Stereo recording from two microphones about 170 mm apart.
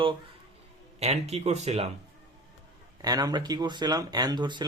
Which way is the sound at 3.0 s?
20° right (ahead or behind).